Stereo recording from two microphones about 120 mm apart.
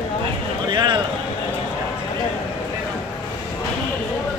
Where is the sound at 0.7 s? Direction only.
40° right (ahead or behind).